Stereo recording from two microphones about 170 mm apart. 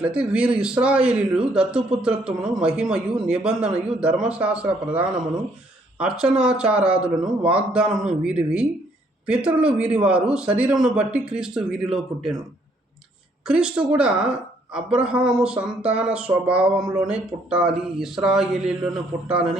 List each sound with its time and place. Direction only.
0.0 s speech: 5° right (ahead or behind)
13.5 s speech: 5° right (ahead or behind)